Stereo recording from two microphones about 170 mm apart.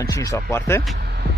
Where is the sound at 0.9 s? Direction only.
75° right (ahead or behind).